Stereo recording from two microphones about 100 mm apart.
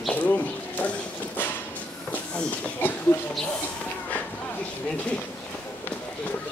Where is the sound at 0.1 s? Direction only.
15° left (ahead or behind).